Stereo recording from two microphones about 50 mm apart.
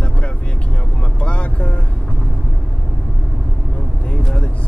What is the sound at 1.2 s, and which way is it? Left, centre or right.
Vehicle, left.